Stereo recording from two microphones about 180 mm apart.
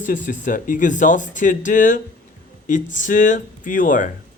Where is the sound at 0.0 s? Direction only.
45° left (ahead or behind).